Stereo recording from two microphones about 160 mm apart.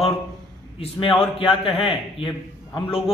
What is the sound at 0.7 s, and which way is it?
A man's voice, 35° left (ahead or behind).